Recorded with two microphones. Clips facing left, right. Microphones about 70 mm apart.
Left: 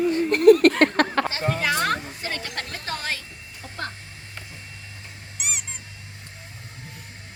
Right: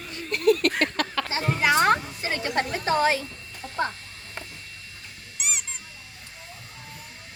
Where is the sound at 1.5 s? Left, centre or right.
Centre.